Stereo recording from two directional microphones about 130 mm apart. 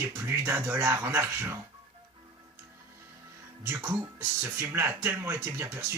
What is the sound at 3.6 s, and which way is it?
Speech, 20° right (ahead or behind).